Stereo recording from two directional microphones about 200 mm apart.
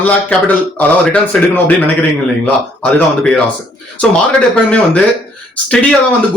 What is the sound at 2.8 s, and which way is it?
Speech, 5° left (ahead or behind).